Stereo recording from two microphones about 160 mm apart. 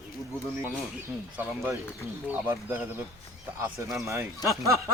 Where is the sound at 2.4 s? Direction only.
10° right (ahead or behind).